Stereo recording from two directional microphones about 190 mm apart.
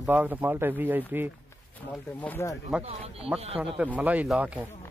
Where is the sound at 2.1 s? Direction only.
10° left (ahead or behind).